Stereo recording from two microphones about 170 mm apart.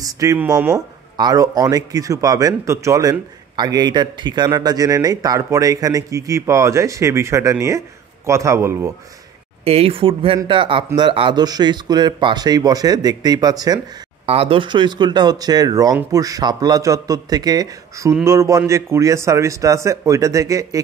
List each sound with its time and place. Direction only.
0.0 s a man's voice: 20° right (ahead or behind)
9.7 s speech: 35° right (ahead or behind)
14.2 s a man's voice: 35° right (ahead or behind); by 20.8 s 20° right (ahead or behind)